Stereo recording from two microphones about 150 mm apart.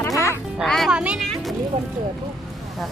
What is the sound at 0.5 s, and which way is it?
Speech, centre (ahead or behind).